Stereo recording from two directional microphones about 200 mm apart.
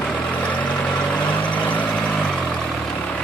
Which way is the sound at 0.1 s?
5° left (ahead or behind).